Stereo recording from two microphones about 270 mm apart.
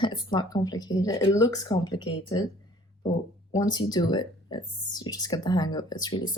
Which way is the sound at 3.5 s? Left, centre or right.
Centre.